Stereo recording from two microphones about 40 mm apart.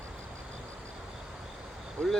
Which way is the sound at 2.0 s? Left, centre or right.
Left.